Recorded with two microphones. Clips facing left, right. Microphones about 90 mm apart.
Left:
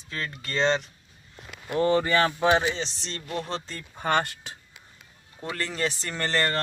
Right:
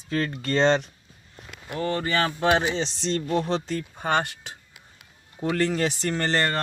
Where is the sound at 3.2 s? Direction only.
25° right (ahead or behind).